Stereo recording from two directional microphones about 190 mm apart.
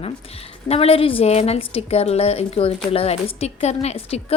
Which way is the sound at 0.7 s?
30° left (ahead or behind).